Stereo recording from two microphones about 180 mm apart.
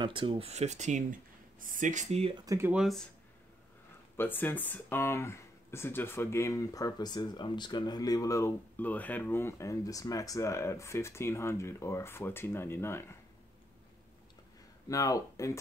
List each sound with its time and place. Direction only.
0.0 s speech: 30° right (ahead or behind)
2.4 s speech: 15° right (ahead or behind)
4.2 s speech: 10° left (ahead or behind)
14.9 s speech: 20° left (ahead or behind)